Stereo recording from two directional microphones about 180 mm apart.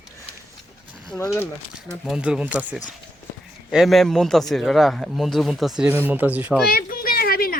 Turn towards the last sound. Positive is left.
turn(degrees=55)  # may be behind; listen again after turning